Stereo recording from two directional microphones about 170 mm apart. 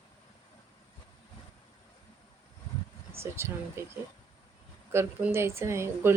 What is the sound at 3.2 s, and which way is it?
Speech, 15° right (ahead or behind).